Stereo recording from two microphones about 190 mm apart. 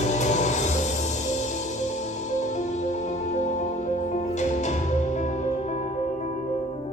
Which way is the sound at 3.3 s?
40° left (ahead or behind).